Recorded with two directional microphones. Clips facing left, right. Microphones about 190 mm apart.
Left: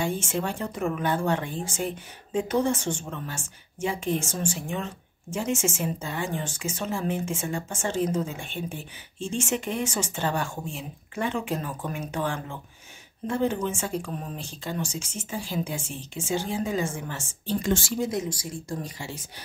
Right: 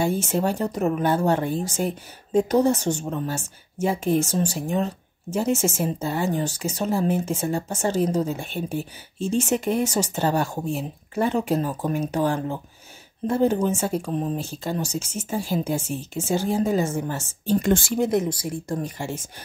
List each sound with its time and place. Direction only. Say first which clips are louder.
0.0 s speech: right 5 dB; 40° right (ahead or behind)